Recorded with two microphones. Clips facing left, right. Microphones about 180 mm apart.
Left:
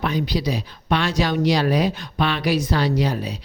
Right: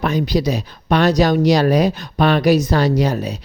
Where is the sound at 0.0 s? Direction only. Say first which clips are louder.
Right 5 dB; 45° right (ahead or behind).